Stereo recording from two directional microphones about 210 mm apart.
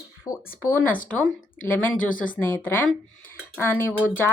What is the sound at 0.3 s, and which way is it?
Speech, 15° left (ahead or behind).